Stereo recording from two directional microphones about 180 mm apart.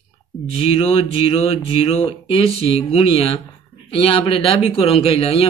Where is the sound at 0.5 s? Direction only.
35° left (ahead or behind).